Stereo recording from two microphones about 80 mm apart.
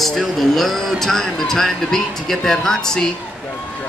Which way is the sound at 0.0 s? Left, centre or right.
Centre.